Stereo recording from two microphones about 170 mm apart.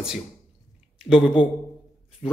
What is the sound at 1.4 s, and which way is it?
Speech, 30° left (ahead or behind).